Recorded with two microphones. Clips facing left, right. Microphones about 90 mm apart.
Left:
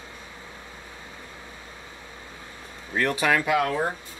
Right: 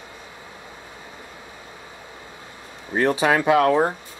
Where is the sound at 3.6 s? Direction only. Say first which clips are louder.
Right 8 dB; 65° right (ahead or behind).